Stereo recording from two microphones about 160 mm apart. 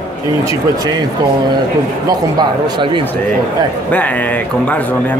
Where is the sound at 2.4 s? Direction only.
30° right (ahead or behind).